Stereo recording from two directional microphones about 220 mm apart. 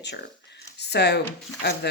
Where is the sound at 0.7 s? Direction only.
50° left (ahead or behind).